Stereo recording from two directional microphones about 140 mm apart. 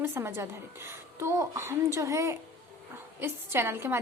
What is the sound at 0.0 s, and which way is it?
A woman's voice, 20° right (ahead or behind).